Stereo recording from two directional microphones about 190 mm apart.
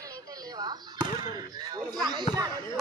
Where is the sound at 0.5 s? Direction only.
20° right (ahead or behind).